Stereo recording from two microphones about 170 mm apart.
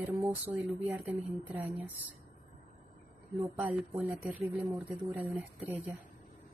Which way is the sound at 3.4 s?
10° right (ahead or behind).